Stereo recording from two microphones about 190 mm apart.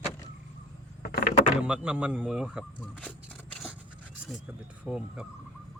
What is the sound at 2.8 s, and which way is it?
Speech, 5° left (ahead or behind).